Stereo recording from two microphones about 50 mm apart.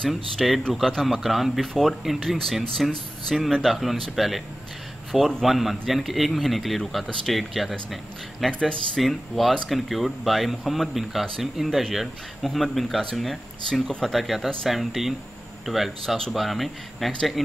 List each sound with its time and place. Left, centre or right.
0.1 s speech: centre
5.4 s speech: centre
8.5 s speech: centre
9.0 s speech: centre
13.7 s speech: centre
14.0 s speech: centre